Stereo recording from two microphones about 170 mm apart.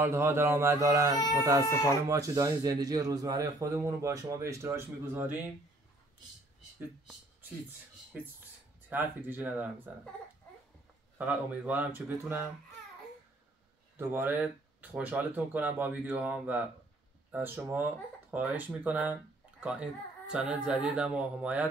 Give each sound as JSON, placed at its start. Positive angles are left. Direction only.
{"t": 0.0, "sound": "speech", "side_deg": -15}
{"t": 1.7, "sound": "speech", "side_deg": 15}
{"t": 2.0, "sound": "speech", "side_deg": -20}
{"t": 8.8, "sound": "speech", "side_deg": -10}
{"t": 11.1, "sound": "speech", "side_deg": -10}
{"t": 13.9, "sound": "speech", "side_deg": -15}